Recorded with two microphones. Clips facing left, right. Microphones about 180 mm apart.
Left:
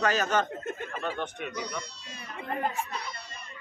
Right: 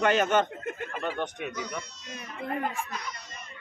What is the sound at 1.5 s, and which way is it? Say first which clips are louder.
Speech: even; 35° left (ahead or behind).